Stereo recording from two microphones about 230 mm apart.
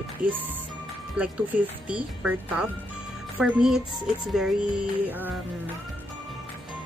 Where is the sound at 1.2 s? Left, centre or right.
Centre.